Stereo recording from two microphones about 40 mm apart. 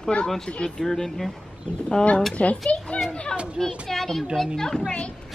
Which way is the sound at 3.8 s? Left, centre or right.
Centre.